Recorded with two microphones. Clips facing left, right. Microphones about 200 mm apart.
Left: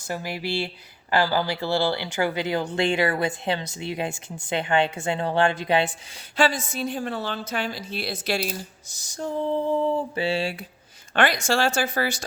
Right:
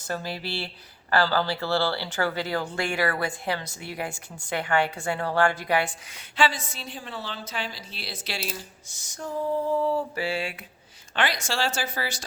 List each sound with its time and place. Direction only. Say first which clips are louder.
0.1 s a woman's voice: left 3 dB; 15° left (ahead or behind)
6.3 s a woman's voice: left 3 dB; 45° left (ahead or behind); by 10.7 s 30° left (ahead or behind)
11.1 s a woman's voice: left 6 dB; 50° left (ahead or behind)